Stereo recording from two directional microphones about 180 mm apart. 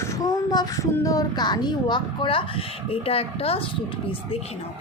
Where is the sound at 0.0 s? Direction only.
20° left (ahead or behind).